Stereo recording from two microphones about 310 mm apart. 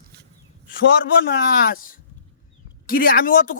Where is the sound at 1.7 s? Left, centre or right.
Left.